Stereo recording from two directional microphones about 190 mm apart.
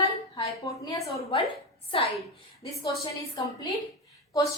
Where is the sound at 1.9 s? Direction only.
30° left (ahead or behind).